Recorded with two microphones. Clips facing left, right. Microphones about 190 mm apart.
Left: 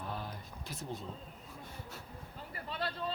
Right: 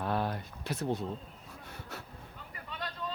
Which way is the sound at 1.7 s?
75° right (ahead or behind).